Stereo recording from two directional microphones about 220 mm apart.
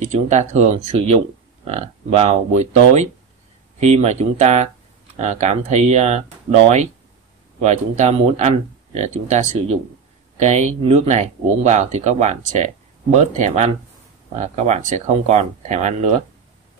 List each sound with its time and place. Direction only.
0.1 s speech: 35° right (ahead or behind)
7.6 s speech: 30° right (ahead or behind)